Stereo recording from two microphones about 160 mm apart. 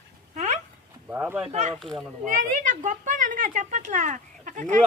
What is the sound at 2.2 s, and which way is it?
Speech, 55° right (ahead or behind).